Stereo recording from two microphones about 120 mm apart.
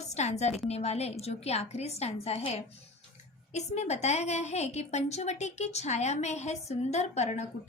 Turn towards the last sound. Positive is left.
turn(degrees=70)  # may be behind; listen again after turning